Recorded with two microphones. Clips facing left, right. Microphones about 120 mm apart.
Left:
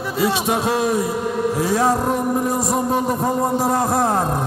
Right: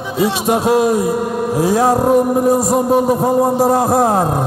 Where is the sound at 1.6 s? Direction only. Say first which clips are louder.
Right 6 dB; 5° right (ahead or behind).